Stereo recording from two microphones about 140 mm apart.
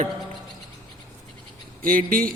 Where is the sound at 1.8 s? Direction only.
90° right.